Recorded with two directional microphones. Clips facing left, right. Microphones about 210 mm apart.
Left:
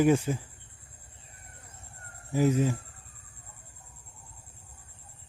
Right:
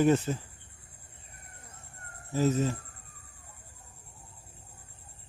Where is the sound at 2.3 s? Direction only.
15° left (ahead or behind).